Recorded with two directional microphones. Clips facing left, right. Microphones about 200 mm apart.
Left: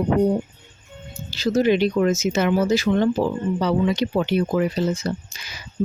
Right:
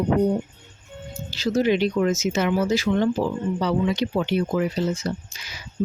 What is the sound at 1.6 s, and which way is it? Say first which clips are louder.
Speech: left 2 dB; 45° left (ahead or behind).